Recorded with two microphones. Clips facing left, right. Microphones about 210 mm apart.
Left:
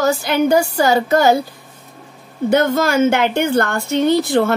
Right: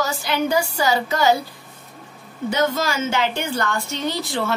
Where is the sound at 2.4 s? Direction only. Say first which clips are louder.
Left 6 dB; 55° left (ahead or behind).